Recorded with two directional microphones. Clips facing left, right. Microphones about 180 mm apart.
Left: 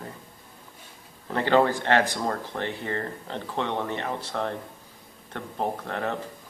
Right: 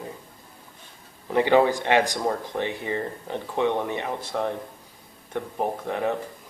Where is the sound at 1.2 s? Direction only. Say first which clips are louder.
Right 3 dB; 15° right (ahead or behind).